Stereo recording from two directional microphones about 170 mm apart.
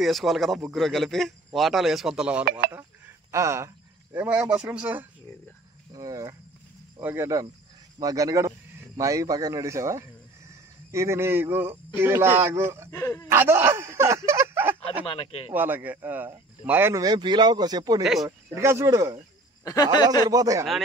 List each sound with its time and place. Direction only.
0.0 s speech: centre (ahead or behind)
2.7 s speech: 20° right (ahead or behind)
5.9 s a man's voice: 20° right (ahead or behind)
12.9 s speech: 15° left (ahead or behind)
13.3 s speech: 15° right (ahead or behind)
15.0 s speech: 35° left (ahead or behind)
15.5 s speech: 10° right (ahead or behind)
18.0 s speech: centre (ahead or behind)
18.5 s speech: 15° right (ahead or behind)
19.6 s speech: 20° left (ahead or behind)
20.2 s a man's voice: 20° right (ahead or behind)